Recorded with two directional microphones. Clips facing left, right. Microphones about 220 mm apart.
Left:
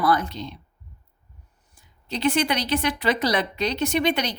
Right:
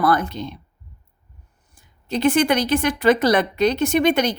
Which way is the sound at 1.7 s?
50° right (ahead or behind).